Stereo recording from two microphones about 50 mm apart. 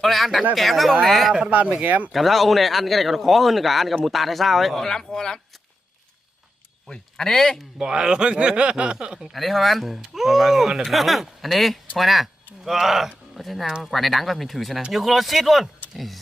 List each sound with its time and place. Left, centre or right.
0.0 s a man's voice: centre
1.5 s speech: right
2.1 s a man's voice: centre
4.8 s speech: centre
6.9 s speech: centre
7.8 s speech: centre
9.3 s a man's voice: centre
15.9 s a sound: centre